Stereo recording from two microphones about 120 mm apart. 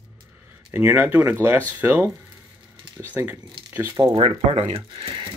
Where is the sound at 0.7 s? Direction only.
15° right (ahead or behind).